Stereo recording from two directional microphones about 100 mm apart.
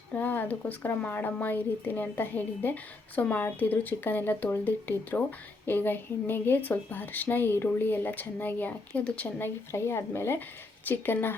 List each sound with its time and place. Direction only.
0.1 s speech: 15° left (ahead or behind)
9.7 s speech: 25° left (ahead or behind)